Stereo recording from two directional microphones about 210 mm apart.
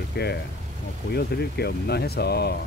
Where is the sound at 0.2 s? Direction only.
50° left (ahead or behind).